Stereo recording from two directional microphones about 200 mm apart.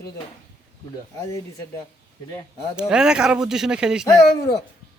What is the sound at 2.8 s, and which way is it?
Speech, 5° right (ahead or behind).